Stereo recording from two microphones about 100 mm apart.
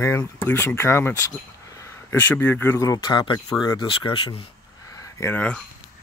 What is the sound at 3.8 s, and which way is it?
Speech, 60° left (ahead or behind).